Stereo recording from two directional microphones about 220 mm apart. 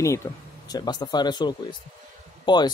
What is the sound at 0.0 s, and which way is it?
Speech, 15° left (ahead or behind).